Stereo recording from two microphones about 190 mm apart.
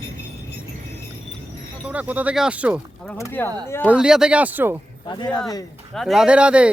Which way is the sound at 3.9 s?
5° right (ahead or behind).